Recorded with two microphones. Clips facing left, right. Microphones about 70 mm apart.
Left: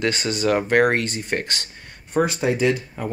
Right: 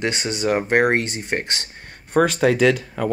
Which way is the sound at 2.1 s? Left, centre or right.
Right.